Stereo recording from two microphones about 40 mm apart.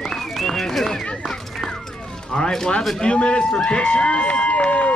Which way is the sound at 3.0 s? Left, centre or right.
Left.